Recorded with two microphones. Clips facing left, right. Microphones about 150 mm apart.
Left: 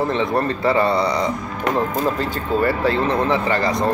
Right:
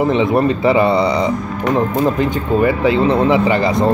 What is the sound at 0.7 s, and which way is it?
Speech, 20° right (ahead or behind).